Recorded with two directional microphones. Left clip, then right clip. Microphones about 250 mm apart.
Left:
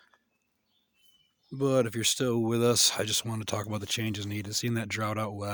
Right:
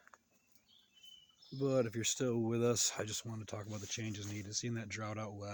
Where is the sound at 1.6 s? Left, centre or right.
Left.